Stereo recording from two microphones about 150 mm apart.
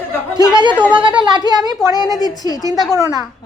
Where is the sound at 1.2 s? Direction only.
30° right (ahead or behind).